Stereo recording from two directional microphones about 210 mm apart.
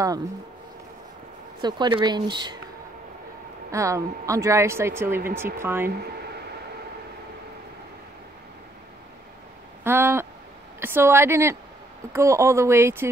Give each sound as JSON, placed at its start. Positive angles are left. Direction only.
{"t": 1.6, "sound": "speech", "side_deg": -20}
{"t": 3.7, "sound": "speech", "side_deg": -15}
{"t": 9.8, "sound": "speech", "side_deg": -10}